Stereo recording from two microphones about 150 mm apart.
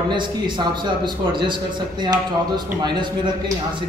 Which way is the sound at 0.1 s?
30° right (ahead or behind).